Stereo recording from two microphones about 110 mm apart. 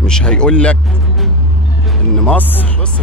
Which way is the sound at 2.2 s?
15° left (ahead or behind).